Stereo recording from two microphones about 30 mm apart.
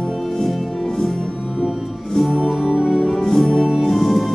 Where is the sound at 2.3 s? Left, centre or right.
Centre.